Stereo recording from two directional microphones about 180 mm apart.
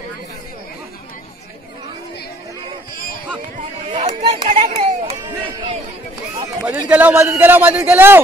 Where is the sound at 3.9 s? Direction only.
35° right (ahead or behind).